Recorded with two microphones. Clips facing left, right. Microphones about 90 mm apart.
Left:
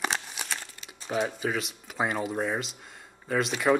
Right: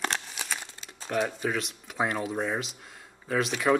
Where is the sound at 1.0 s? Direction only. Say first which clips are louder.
Even; 5° left (ahead or behind).